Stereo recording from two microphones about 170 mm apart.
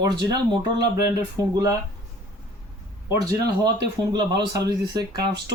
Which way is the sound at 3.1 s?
20° right (ahead or behind).